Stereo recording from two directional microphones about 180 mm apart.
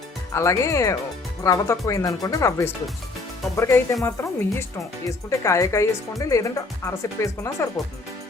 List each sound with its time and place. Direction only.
0.3 s speech: 15° left (ahead or behind)